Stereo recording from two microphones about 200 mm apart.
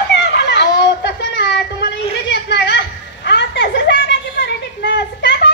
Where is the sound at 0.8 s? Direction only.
60° left (ahead or behind).